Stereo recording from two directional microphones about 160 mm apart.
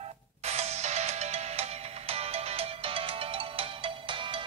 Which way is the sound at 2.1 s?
40° right (ahead or behind).